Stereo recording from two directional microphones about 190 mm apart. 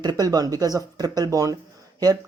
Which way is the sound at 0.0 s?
20° right (ahead or behind).